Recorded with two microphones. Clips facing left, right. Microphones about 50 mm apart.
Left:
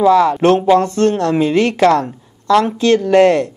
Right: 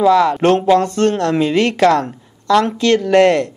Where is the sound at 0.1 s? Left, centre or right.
Right.